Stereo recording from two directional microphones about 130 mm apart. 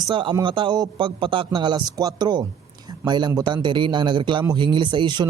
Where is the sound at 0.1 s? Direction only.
40° right (ahead or behind).